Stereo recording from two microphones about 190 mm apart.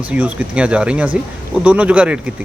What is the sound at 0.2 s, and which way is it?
Speech, 5° right (ahead or behind).